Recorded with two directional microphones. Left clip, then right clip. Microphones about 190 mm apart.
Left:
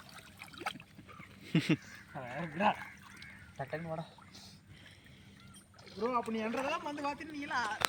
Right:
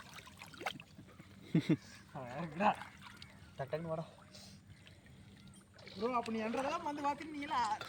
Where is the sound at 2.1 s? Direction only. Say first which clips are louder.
Left 3 dB; 45° left (ahead or behind).